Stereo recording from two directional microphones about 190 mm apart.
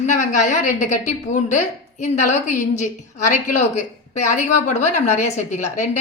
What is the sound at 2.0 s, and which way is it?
A woman's voice, 35° left (ahead or behind).